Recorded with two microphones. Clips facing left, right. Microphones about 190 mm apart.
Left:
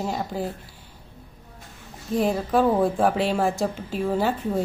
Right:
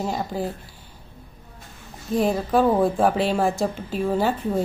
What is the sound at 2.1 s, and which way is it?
Speech, 35° right (ahead or behind).